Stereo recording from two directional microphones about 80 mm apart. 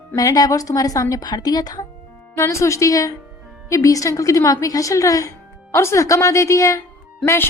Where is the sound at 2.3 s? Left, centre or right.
Left.